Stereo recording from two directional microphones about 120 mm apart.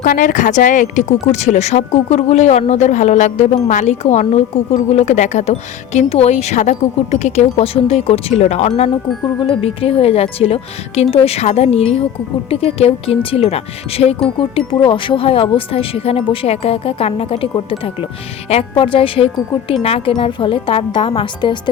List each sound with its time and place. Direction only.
0.0 s speech: 90° left; by 14.2 s 55° left (ahead or behind)
14.7 s speech: 45° left (ahead or behind)